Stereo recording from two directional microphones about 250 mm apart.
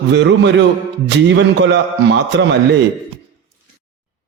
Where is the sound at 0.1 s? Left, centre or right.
Right.